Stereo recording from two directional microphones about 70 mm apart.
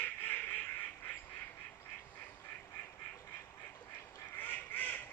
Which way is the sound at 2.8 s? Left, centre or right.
Left.